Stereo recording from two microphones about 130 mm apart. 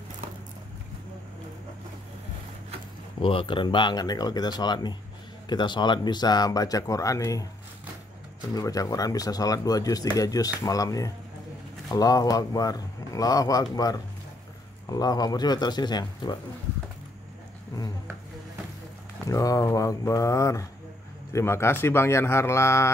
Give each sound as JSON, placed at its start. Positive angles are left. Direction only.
{"t": 3.2, "sound": "speech", "side_deg": 45}
{"t": 8.5, "sound": "speech", "side_deg": 30}
{"t": 19.2, "sound": "speech", "side_deg": 25}